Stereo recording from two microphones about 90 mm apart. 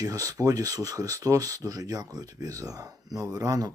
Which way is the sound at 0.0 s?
40° right (ahead or behind).